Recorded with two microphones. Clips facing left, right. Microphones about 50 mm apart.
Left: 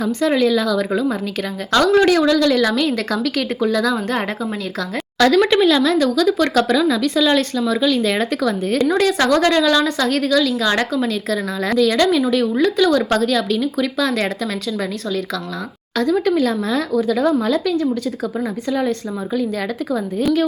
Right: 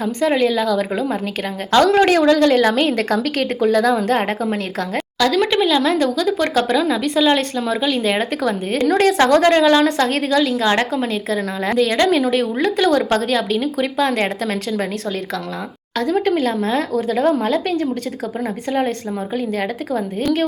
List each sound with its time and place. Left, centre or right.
0.0 s a woman's voice: right
5.2 s speech: centre
5.8 s a woman's voice: right
6.1 s speech: centre
8.9 s a woman's voice: right
16.0 s a woman's voice: right